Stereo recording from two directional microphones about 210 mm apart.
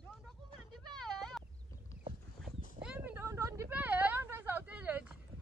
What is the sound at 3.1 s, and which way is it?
Vehicle, 10° right (ahead or behind).